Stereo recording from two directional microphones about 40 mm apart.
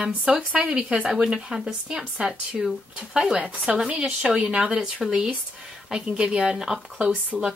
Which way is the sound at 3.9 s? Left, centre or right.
Right.